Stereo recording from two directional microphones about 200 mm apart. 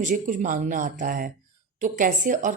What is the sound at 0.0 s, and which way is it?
Speech, 40° right (ahead or behind).